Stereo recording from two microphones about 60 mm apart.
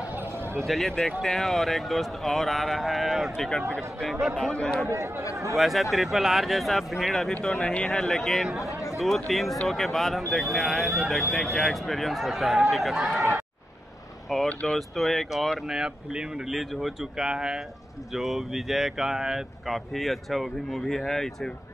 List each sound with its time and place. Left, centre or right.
0.1 s a sound: right
0.7 s speech: centre
4.4 s speech: centre
4.8 s speech: right
5.6 s speech: centre
8.8 s chatter: centre
9.3 s speech: centre
14.3 s speech: centre